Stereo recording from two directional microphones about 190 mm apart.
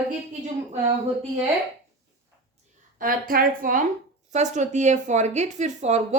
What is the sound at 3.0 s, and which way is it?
A woman's voice, 50° right (ahead or behind).